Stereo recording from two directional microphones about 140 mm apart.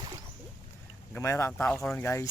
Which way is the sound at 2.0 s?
20° left (ahead or behind).